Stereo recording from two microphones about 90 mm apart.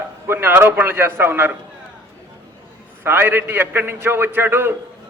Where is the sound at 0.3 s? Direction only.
25° right (ahead or behind).